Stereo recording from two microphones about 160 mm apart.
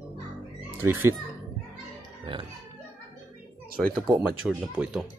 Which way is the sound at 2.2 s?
30° right (ahead or behind).